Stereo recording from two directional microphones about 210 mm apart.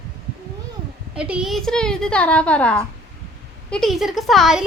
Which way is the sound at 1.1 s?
5° right (ahead or behind).